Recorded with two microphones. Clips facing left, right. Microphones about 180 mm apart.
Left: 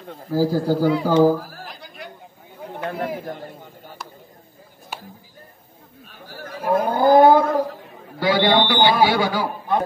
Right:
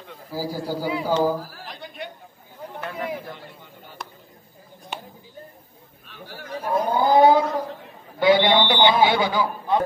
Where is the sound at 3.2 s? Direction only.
45° left (ahead or behind).